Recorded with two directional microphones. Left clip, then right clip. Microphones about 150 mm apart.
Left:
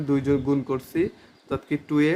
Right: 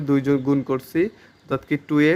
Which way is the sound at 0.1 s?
40° right (ahead or behind).